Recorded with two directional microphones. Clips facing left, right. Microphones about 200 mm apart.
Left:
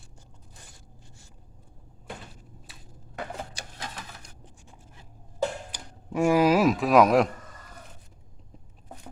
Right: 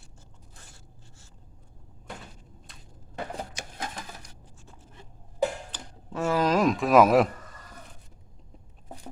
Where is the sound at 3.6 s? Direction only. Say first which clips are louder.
Right 2 dB; 35° left (ahead or behind).